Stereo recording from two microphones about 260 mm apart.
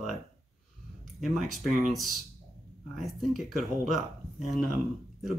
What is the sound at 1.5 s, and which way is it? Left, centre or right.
Speech, centre.